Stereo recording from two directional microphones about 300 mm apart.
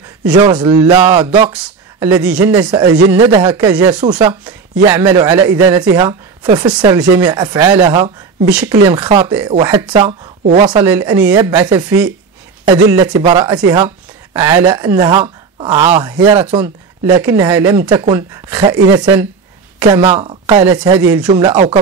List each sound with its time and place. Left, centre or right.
0.2 s speech: centre